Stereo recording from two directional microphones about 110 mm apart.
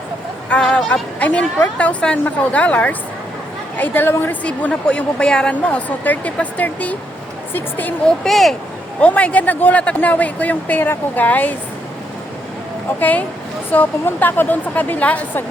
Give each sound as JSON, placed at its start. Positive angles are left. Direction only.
{"t": 0.5, "sound": "a woman's voice", "side_deg": 5}
{"t": 8.2, "sound": "speech", "side_deg": 0}
{"t": 9.0, "sound": "a woman's voice", "side_deg": 10}
{"t": 13.0, "sound": "a woman's voice", "side_deg": 15}